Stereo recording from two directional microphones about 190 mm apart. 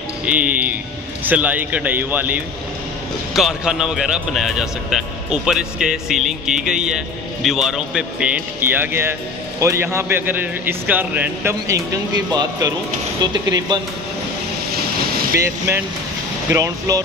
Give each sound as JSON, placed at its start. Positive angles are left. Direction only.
{"t": 0.2, "sound": "a man's voice", "side_deg": -5}
{"t": 16.4, "sound": "a man's voice", "side_deg": -15}